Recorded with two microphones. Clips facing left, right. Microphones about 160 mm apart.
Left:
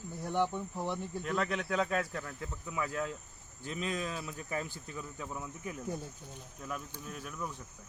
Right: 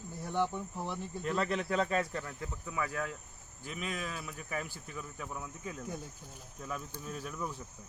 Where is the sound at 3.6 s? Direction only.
5° right (ahead or behind).